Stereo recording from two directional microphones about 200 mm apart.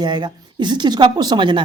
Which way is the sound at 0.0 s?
20° right (ahead or behind).